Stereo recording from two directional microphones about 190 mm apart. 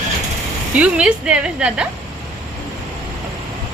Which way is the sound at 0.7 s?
5° right (ahead or behind).